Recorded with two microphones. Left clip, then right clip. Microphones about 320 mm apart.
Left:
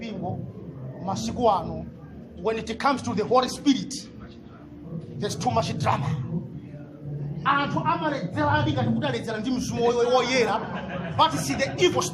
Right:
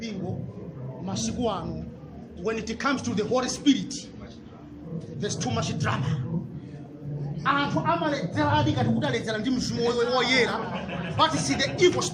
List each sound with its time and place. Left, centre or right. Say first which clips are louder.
1.0 s a man's voice: left 6 dB; centre
5.2 s a man's voice: left 5 dB; centre
7.4 s a woman's voice: left 1 dB; centre